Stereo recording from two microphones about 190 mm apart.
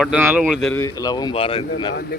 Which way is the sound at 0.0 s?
5° right (ahead or behind).